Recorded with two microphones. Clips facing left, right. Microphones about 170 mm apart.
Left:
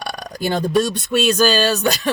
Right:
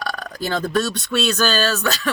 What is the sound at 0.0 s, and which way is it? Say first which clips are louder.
Speech: left 2 dB; 15° left (ahead or behind).